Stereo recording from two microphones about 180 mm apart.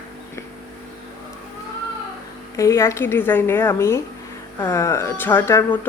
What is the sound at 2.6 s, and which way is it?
Speech, 15° left (ahead or behind).